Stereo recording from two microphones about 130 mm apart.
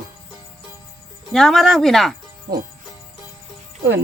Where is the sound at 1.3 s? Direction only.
Centre (ahead or behind).